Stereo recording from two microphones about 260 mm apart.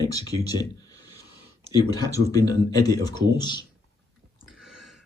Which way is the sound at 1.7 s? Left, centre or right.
Centre.